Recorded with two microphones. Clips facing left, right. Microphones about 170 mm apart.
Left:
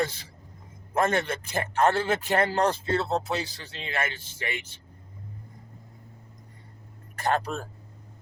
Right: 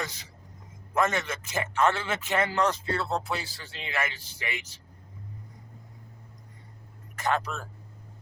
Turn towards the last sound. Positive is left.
turn(degrees=35)  # may be behind; listen again after turning